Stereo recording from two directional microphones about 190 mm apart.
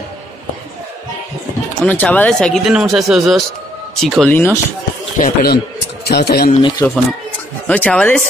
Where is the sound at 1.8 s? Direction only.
10° left (ahead or behind).